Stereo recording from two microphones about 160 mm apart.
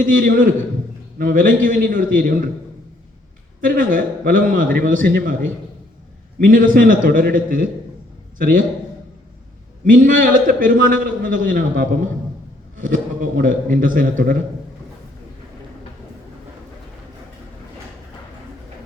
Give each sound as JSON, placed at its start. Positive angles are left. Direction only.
{"t": 0.0, "sound": "a man's voice", "side_deg": -60}
{"t": 3.6, "sound": "a man's voice", "side_deg": -60}
{"t": 9.8, "sound": "a man's voice", "side_deg": -55}